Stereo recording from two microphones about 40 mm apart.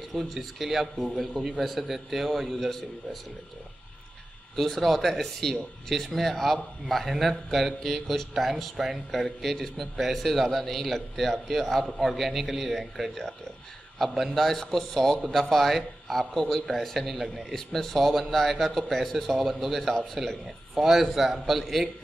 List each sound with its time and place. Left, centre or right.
0.1 s speech: centre
4.6 s speech: centre
14.2 s speech: centre
20.7 s speech: centre